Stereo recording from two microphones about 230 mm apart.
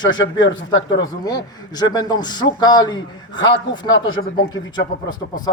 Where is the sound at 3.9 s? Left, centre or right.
Left.